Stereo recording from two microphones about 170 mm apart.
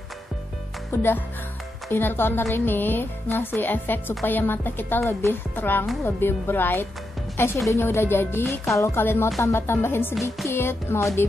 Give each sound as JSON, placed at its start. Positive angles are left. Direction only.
{"t": 0.9, "sound": "speech", "side_deg": 15}